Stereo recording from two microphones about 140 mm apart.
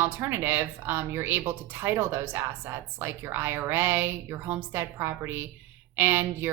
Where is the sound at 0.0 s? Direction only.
15° right (ahead or behind).